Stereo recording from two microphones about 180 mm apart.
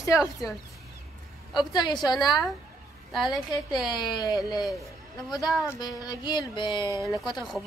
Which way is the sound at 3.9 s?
20° left (ahead or behind).